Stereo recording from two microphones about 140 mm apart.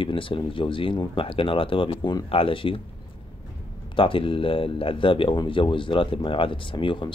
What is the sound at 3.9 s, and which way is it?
Speech, 40° left (ahead or behind).